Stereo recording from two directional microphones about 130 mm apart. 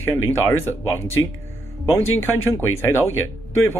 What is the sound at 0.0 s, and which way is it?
Speech, 20° left (ahead or behind).